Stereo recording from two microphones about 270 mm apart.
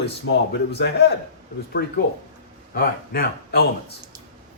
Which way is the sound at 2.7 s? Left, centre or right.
Left.